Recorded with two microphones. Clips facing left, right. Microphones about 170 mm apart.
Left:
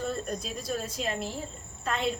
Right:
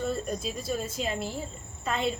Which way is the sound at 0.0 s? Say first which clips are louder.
Right 2 dB; centre (ahead or behind).